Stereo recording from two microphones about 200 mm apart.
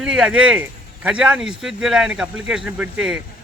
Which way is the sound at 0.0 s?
5° right (ahead or behind).